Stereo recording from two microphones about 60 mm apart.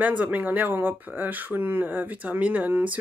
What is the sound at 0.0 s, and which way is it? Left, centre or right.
Speech, right.